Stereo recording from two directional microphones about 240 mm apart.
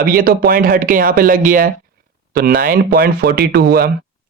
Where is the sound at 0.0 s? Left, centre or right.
Right.